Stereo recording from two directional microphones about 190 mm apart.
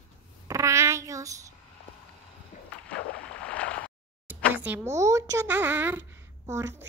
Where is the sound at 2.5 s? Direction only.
40° left (ahead or behind).